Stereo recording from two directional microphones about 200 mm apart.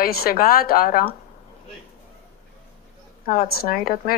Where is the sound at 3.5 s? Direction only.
50° left (ahead or behind).